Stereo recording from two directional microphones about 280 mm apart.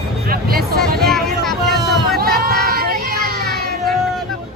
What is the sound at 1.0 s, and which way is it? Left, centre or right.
Vehicle, centre.